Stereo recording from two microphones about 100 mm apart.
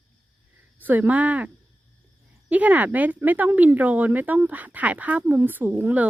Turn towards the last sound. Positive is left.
turn(degrees=-15)  # may be behind; listen again after turning